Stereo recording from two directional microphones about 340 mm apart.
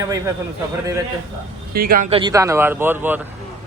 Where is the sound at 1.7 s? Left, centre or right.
Right.